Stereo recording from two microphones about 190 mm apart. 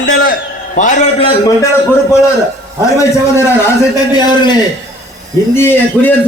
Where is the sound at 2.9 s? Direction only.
15° left (ahead or behind).